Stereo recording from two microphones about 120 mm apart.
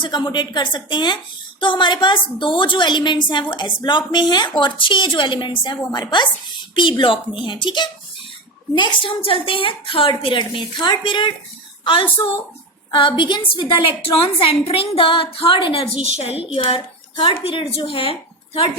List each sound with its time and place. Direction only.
0.0 s a woman's voice: 40° left (ahead or behind)